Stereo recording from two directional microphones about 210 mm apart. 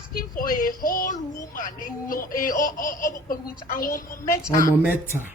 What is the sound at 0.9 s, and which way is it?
A woman's voice, 40° left (ahead or behind).